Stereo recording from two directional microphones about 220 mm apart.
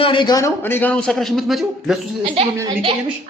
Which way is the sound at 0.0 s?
20° left (ahead or behind).